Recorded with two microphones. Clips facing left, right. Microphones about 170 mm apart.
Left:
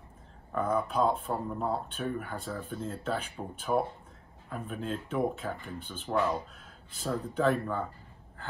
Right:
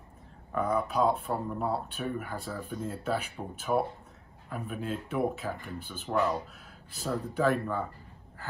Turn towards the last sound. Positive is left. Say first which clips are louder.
# even
turn(degrees=-5)  # may be behind; listen again after turning